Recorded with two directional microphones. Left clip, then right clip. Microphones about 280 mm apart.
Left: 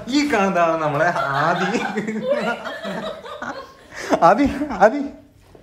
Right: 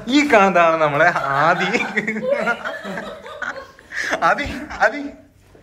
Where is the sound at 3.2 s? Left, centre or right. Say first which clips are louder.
Right 2 dB; left.